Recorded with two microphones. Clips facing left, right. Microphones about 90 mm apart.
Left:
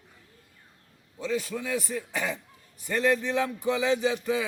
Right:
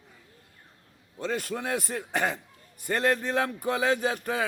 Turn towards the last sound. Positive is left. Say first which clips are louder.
# left 2 dB
turn(degrees=-50)  # may be behind; listen again after turning